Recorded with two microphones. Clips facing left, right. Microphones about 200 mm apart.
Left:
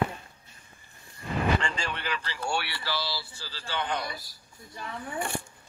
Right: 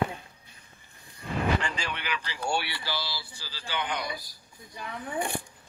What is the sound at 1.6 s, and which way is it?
Speech, 5° right (ahead or behind).